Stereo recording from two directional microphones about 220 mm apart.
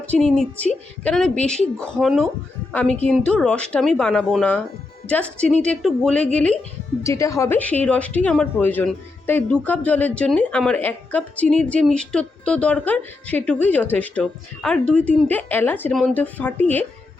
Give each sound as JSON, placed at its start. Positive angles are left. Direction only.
{"t": 0.1, "sound": "a woman's voice", "side_deg": 0}